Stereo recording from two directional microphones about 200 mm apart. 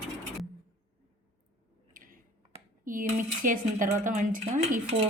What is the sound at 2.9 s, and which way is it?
Speech, 40° right (ahead or behind).